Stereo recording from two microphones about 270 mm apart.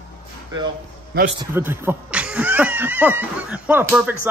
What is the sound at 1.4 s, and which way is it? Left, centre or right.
Speech, centre.